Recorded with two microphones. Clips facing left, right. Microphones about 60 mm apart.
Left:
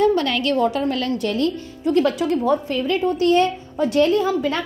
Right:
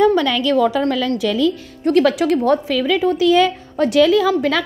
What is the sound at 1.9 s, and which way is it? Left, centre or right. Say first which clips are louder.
A woman's voice: right 4 dB; right.